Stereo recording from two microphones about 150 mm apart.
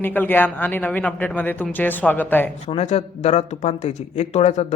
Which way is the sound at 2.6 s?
45° left (ahead or behind).